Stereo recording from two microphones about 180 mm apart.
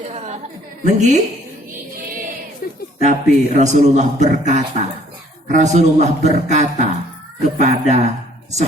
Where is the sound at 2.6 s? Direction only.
50° left (ahead or behind).